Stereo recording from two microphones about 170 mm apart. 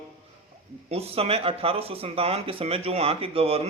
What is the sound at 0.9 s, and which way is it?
Speech, 35° right (ahead or behind).